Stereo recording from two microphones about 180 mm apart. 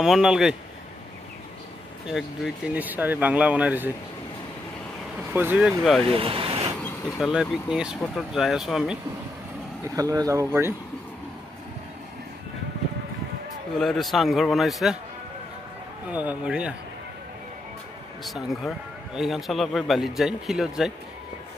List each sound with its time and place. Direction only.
0.0 s a man's voice: 5° right (ahead or behind)
2.0 s speech: centre (ahead or behind)
5.3 s a man's voice: 10° right (ahead or behind)
6.0 s speech: 30° right (ahead or behind)
6.8 s a man's voice: centre (ahead or behind)
9.9 s speech: 20° right (ahead or behind)
13.7 s a man's voice: centre (ahead or behind)
16.1 s speech: 10° right (ahead or behind)
18.2 s a man's voice: centre (ahead or behind)